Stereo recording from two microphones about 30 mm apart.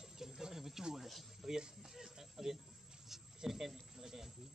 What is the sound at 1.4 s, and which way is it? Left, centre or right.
Music, right.